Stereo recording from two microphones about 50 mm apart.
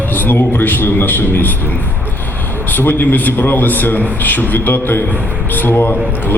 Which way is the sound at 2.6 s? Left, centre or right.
Left.